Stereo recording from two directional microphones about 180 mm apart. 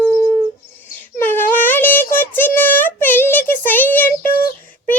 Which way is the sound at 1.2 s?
10° left (ahead or behind).